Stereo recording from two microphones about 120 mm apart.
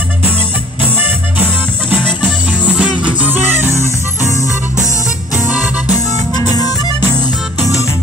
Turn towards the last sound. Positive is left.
turn(degrees=30)  # may be behind; listen again after turning